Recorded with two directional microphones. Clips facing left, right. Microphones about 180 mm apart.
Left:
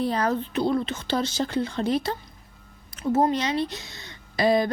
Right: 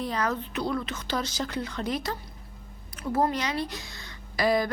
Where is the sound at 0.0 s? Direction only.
30° left (ahead or behind).